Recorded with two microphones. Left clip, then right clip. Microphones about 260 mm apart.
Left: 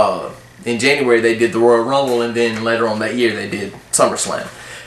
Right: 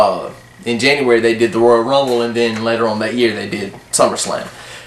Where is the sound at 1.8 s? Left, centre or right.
Centre.